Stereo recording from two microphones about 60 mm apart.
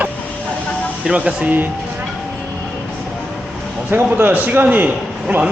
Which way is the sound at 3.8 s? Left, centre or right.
Right.